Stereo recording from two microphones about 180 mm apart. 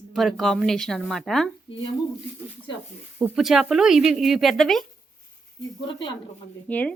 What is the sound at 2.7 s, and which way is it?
Speech, 25° left (ahead or behind).